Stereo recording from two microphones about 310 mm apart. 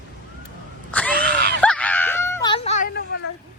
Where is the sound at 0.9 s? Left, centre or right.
Centre; by 3.1 s left.